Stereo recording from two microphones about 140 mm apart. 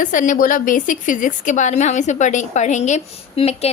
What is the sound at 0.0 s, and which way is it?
A woman's voice, 70° left (ahead or behind).